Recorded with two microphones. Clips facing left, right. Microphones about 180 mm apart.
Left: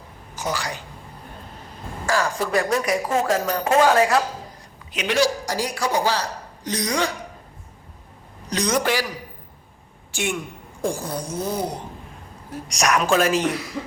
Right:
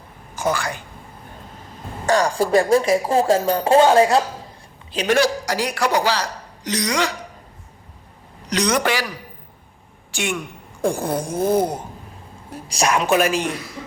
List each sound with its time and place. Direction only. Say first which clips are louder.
0.3 s speech: right 5 dB; 50° right (ahead or behind)
2.0 s speech: right 5 dB; 35° right (ahead or behind)
5.0 s a man's voice: right 3 dB; 55° right (ahead or behind); by 7.1 s 85° right
8.4 s a man's voice: right 2 dB; 75° right (ahead or behind)
10.1 s speech: right 1 dB; 80° right
10.8 s a sound: right 5 dB; 55° right (ahead or behind)
12.6 s speech: right 1 dB; 30° right (ahead or behind); by 13.5 s 15° right (ahead or behind)